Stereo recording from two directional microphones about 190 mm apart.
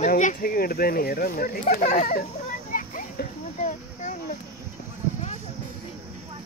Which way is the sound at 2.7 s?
45° left (ahead or behind).